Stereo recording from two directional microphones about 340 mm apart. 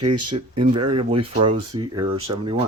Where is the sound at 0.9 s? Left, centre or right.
Centre.